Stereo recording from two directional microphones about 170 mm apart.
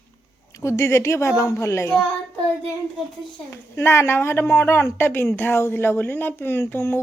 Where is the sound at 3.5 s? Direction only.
15° left (ahead or behind).